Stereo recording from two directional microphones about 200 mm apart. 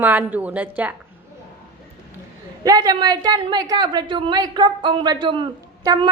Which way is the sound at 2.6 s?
20° right (ahead or behind).